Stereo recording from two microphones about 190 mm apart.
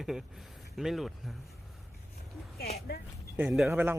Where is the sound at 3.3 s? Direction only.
5° right (ahead or behind).